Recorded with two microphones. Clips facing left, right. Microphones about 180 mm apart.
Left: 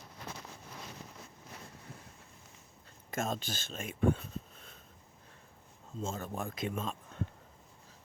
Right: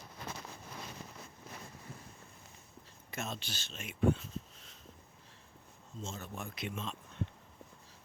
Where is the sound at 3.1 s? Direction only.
45° left (ahead or behind).